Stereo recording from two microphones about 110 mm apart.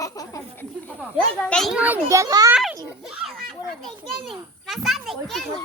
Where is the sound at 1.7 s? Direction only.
15° right (ahead or behind).